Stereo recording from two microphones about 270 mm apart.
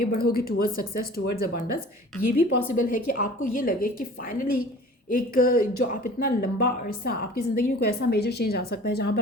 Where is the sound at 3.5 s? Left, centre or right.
Left.